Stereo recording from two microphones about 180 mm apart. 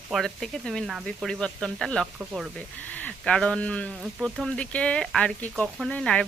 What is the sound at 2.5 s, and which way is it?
Speech, 10° left (ahead or behind).